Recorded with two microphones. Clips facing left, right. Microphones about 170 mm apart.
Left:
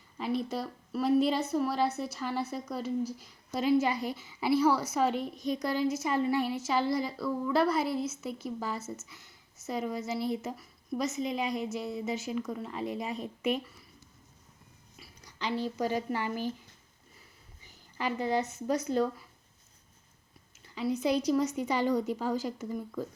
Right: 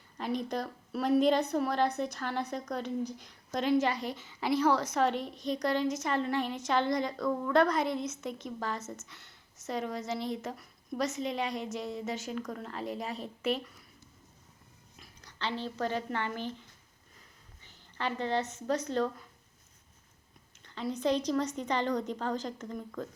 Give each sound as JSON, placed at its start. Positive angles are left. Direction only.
{"t": 0.4, "sound": "a woman's voice", "side_deg": 5}
{"t": 14.9, "sound": "speech", "side_deg": 10}
{"t": 17.6, "sound": "speech", "side_deg": 10}
{"t": 20.7, "sound": "a woman's voice", "side_deg": 5}